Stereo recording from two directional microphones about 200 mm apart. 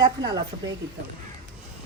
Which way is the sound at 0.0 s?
20° right (ahead or behind).